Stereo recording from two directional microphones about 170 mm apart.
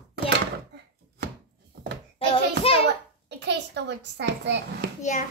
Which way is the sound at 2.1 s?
35° left (ahead or behind).